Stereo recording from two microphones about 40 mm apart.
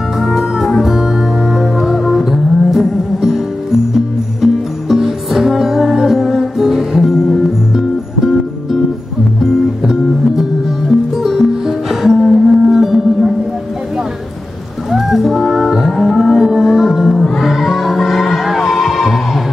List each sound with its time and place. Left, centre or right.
0.2 s music: centre
4.4 s music: centre
9.4 s music: centre
14.9 s music: centre